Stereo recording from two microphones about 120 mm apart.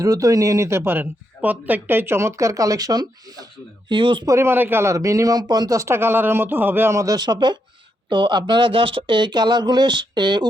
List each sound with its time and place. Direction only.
0.0 s speech: 30° right (ahead or behind)
3.8 s speech: 45° right (ahead or behind)
4.3 s speech: 20° right (ahead or behind); by 10.4 s 40° right (ahead or behind)